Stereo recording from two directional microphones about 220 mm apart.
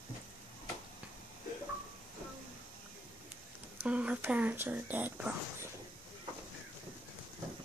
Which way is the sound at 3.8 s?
5° right (ahead or behind).